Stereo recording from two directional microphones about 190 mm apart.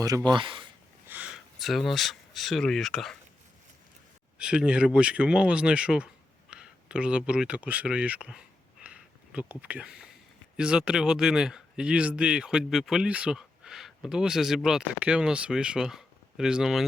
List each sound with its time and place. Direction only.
0.0 s speech: 20° right (ahead or behind)
1.0 s speech: 10° right (ahead or behind)
4.4 s speech: 5° right (ahead or behind)